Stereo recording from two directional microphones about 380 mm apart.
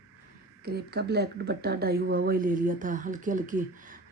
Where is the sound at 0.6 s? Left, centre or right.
Right.